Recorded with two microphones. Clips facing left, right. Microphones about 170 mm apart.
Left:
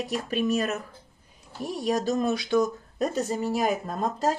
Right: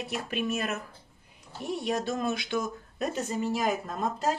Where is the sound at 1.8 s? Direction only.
40° left (ahead or behind).